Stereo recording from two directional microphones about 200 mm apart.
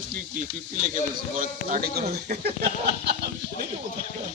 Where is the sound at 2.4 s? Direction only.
55° right (ahead or behind).